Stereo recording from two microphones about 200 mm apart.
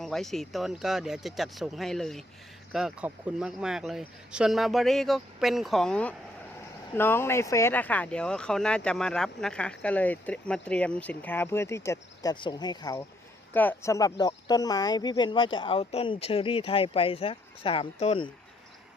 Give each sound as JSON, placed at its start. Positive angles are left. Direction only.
{"t": 0.0, "sound": "speech", "side_deg": 0}